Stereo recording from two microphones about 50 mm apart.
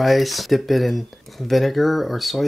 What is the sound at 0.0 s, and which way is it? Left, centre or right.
Speech, centre.